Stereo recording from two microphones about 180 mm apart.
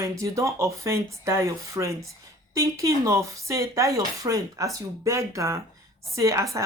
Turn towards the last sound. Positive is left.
turn(degrees=-15)  # may be behind; listen again after turning